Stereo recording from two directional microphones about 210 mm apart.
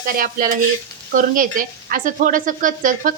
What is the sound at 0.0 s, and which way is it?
Stir, 45° right (ahead or behind).